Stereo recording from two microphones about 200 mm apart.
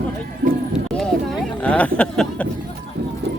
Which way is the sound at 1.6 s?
5° left (ahead or behind).